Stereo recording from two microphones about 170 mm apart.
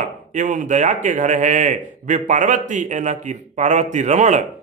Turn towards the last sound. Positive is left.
turn(degrees=-45)  # may be behind; listen again after turning